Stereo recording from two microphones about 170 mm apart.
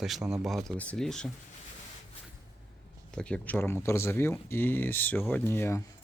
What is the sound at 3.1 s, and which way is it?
Speech, 5° left (ahead or behind).